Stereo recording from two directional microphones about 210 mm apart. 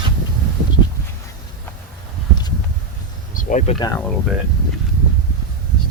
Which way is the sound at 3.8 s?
15° left (ahead or behind).